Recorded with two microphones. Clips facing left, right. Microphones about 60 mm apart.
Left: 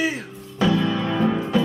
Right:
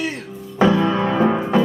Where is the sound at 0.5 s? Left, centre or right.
Right.